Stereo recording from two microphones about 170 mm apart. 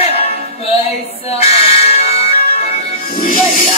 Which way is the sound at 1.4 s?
35° left (ahead or behind).